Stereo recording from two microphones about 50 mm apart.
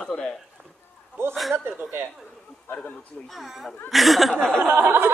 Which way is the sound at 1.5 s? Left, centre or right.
Right.